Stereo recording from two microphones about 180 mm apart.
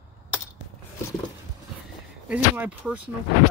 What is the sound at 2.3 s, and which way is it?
Speech, 5° right (ahead or behind).